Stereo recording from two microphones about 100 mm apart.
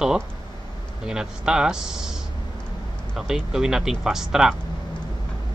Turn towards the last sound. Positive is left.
turn(degrees=-5)  # may be behind; listen again after turning